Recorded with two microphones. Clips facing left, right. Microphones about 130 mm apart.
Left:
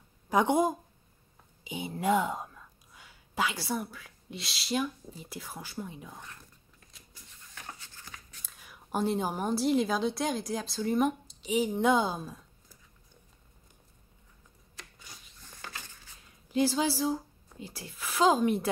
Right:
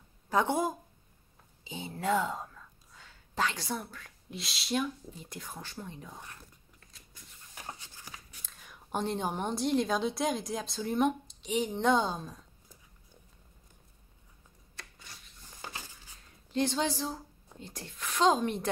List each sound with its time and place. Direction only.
0.3 s speech: 15° left (ahead or behind)
7.5 s a sound: 20° right (ahead or behind)
8.5 s a woman's voice: 5° left (ahead or behind)
16.4 s a woman's voice: 5° left (ahead or behind)